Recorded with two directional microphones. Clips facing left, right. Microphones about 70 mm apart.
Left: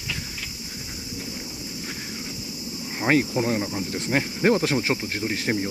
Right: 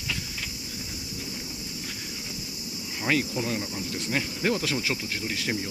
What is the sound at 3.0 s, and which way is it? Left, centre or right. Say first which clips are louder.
Speech: left 5 dB; left.